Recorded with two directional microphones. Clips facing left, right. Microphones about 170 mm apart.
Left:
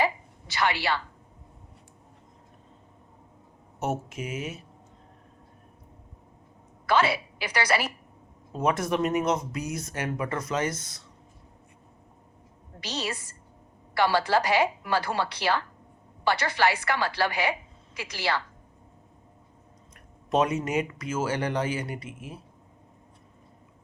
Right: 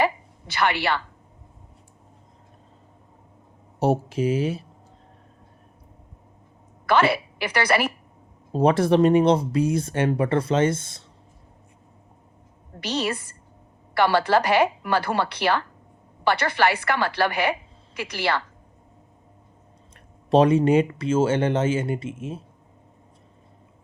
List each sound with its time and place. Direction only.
0.0 s a sound: 60° right (ahead or behind)
3.8 s speech: 35° right (ahead or behind)
6.8 s a woman's voice: 60° right (ahead or behind)
8.5 s speech: 30° right (ahead or behind)
12.8 s a woman's voice: 60° right (ahead or behind)
20.3 s speech: 30° right (ahead or behind)